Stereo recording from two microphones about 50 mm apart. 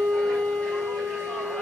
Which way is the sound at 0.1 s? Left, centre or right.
Centre.